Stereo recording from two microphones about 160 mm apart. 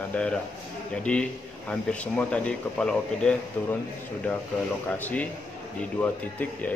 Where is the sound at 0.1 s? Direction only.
5° left (ahead or behind).